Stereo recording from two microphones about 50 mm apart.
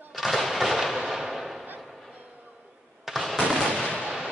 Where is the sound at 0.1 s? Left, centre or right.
Centre.